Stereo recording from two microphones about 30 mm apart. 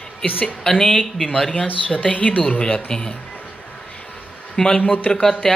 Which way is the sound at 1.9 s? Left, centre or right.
Left.